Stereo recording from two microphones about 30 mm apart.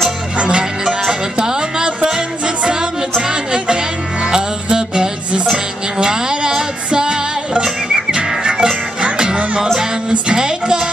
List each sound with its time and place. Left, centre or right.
0.4 s music: right
1.4 s music: right
5.9 s a sound: right
7.6 s music: right
9.0 s music: right